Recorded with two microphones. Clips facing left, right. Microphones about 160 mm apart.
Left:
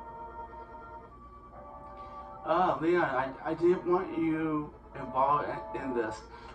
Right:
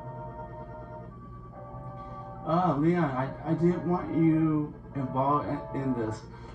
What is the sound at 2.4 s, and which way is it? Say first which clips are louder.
A man's voice: right 2 dB; 90° left.